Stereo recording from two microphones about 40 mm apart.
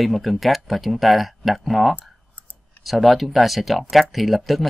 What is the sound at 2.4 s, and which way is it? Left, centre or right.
Clicking, left.